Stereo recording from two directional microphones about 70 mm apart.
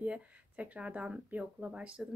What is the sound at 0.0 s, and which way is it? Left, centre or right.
Speech, centre.